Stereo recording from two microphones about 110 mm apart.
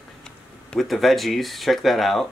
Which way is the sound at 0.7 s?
Centre (ahead or behind).